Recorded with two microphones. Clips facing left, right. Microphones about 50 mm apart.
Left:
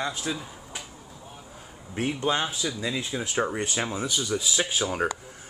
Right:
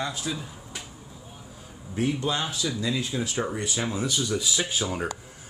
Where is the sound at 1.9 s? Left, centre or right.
Left.